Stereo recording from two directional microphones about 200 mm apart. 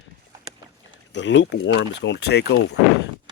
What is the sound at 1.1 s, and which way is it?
A man's voice, 65° left (ahead or behind).